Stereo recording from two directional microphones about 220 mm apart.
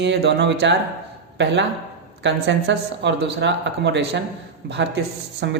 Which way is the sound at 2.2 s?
55° right (ahead or behind).